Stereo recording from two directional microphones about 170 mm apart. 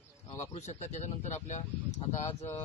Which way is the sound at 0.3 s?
45° left (ahead or behind).